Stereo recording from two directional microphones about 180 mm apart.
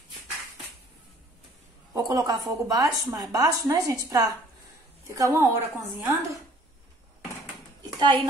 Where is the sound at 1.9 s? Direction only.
20° right (ahead or behind).